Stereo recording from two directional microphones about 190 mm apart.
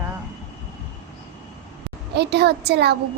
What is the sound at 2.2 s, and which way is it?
Speech, 60° right (ahead or behind).